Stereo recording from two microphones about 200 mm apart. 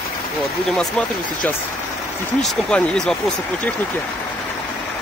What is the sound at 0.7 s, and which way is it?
Speech, 5° left (ahead or behind).